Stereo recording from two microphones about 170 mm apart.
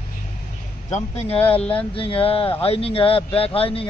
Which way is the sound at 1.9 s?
35° left (ahead or behind).